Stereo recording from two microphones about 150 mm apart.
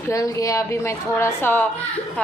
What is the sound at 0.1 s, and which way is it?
A woman's voice, 20° left (ahead or behind).